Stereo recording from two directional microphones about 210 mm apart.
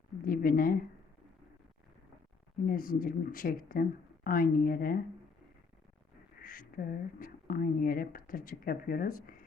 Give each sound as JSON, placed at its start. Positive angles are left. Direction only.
{"t": 0.3, "sound": "speech", "side_deg": 40}
{"t": 2.6, "sound": "speech", "side_deg": 40}
{"t": 6.4, "sound": "speech", "side_deg": 40}